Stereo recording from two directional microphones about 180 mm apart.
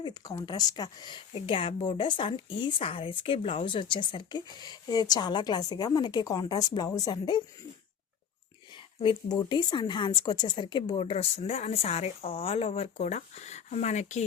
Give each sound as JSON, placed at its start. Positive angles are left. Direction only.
{"t": 0.0, "sound": "a woman's voice", "side_deg": 20}
{"t": 9.0, "sound": "a woman's voice", "side_deg": 25}